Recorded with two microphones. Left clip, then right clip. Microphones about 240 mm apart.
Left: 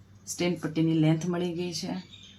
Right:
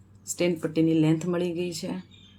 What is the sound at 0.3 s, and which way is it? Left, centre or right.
Speech, centre.